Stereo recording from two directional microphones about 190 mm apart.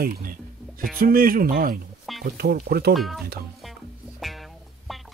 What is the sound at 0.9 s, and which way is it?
Speech, 50° right (ahead or behind).